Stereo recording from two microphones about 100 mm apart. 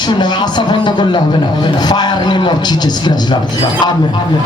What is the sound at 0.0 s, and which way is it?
Speech, 45° left (ahead or behind).